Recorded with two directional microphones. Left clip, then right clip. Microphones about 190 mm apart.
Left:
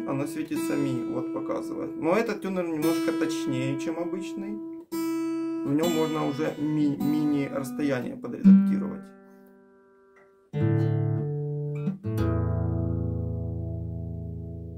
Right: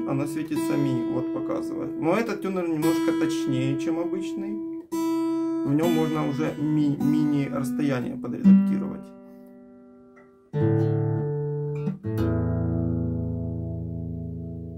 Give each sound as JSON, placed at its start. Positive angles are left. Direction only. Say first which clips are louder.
{"t": 0.0, "sound": "speech", "louder": "right 2 dB", "side_deg": 15}
{"t": 5.7, "sound": "speech", "louder": "even", "side_deg": 15}
{"t": 10.5, "sound": "music", "louder": "right 4 dB", "side_deg": 30}